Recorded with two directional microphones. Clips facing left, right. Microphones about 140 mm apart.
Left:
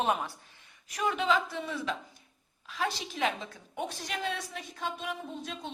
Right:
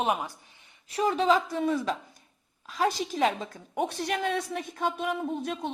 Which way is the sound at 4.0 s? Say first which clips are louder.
Right 7 dB; 55° right (ahead or behind).